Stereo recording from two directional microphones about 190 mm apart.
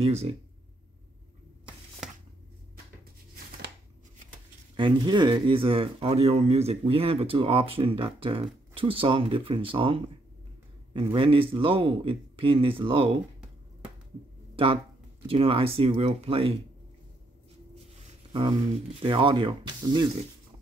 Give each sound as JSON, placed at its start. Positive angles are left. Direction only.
{"t": 0.0, "sound": "speech", "side_deg": -35}
{"t": 4.7, "sound": "speech", "side_deg": -25}
{"t": 11.1, "sound": "speech", "side_deg": -30}
{"t": 14.5, "sound": "a sound", "side_deg": -30}
{"t": 15.2, "sound": "speech", "side_deg": -30}
{"t": 17.9, "sound": "a sound", "side_deg": -25}
{"t": 18.9, "sound": "speech", "side_deg": -25}